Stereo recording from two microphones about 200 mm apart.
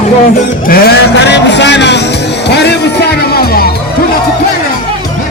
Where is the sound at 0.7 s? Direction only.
55° left (ahead or behind).